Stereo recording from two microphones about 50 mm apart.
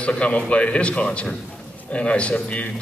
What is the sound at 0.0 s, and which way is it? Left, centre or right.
Speech, left.